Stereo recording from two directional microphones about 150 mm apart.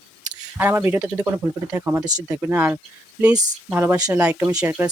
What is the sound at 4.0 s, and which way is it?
Speech, 25° right (ahead or behind).